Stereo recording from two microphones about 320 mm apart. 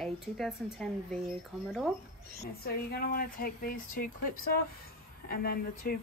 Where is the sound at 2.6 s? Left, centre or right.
Left.